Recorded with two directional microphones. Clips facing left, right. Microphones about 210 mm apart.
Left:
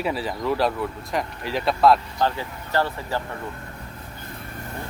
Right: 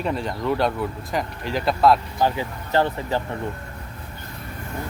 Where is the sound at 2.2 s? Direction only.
15° right (ahead or behind).